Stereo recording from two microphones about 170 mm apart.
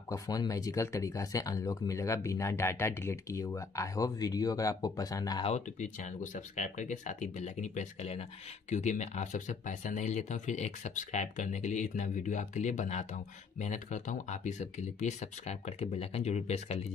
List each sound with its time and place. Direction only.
0.1 s speech: 20° left (ahead or behind)
5.4 s speech: 45° left (ahead or behind)